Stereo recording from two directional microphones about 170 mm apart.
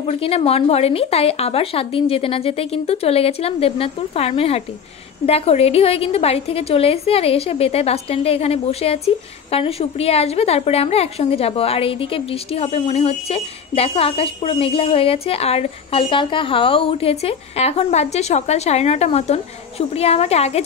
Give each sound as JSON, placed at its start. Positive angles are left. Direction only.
{"t": 0.0, "sound": "a woman's voice", "side_deg": 35}